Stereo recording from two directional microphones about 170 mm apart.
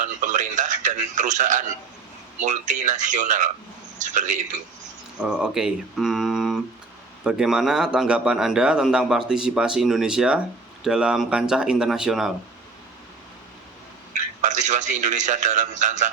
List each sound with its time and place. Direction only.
0.0 s a sound: 45° right (ahead or behind)
2.4 s a man's voice: 45° right (ahead or behind)
5.2 s a man's voice: 5° right (ahead or behind)
14.1 s a man's voice: 45° right (ahead or behind)